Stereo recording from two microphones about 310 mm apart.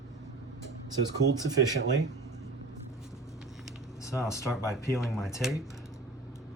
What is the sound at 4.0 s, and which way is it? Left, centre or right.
Speech, centre.